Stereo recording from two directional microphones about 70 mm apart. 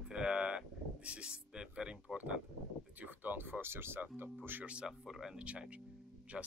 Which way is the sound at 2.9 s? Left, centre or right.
Right.